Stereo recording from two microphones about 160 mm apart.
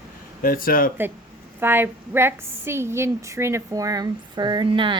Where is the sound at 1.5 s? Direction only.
15° right (ahead or behind).